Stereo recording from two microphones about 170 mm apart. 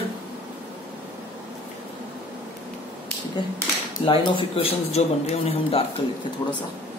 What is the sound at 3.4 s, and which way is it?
A man's voice, 25° left (ahead or behind).